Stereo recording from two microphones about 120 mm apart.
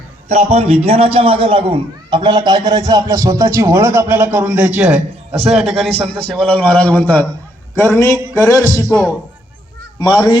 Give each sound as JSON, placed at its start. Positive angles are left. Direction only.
{"t": 0.3, "sound": "a man's voice", "side_deg": -65}
{"t": 5.5, "sound": "a man's voice", "side_deg": 0}
{"t": 5.9, "sound": "a man's voice", "side_deg": -50}
{"t": 6.4, "sound": "a man's voice", "side_deg": 10}